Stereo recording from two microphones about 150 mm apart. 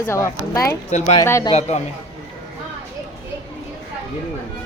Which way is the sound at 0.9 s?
50° left (ahead or behind).